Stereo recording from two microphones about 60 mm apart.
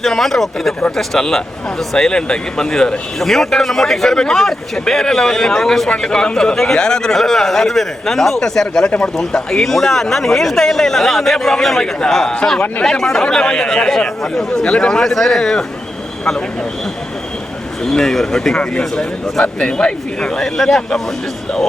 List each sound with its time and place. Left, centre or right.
0.0 s a man's voice: centre
17.8 s a man's voice: centre